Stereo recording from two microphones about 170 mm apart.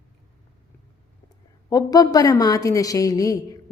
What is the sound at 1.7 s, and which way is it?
A woman's voice, 20° left (ahead or behind).